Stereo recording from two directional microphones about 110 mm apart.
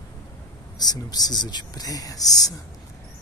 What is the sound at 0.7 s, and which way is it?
Speech, 35° left (ahead or behind).